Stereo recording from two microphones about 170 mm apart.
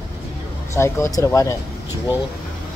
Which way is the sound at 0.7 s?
15° left (ahead or behind).